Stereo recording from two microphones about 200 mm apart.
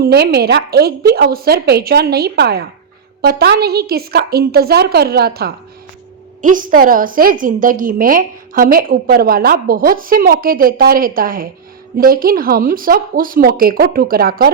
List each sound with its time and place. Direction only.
0.0 s a woman's voice: 55° right (ahead or behind)